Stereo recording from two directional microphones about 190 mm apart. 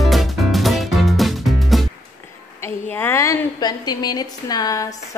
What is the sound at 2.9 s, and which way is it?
A woman's voice, 10° left (ahead or behind).